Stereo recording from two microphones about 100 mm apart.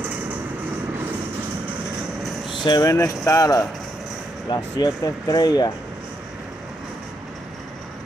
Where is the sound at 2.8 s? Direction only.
35° left (ahead or behind).